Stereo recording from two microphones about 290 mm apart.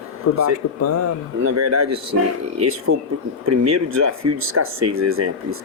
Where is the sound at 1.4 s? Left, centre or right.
Right.